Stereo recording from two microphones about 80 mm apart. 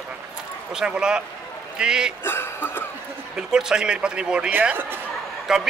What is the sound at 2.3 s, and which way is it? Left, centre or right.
Speech, left.